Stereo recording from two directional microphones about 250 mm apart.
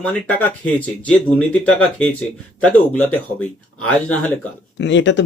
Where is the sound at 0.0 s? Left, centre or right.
Centre.